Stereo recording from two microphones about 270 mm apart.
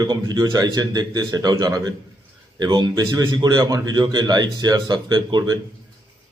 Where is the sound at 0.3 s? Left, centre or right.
Centre.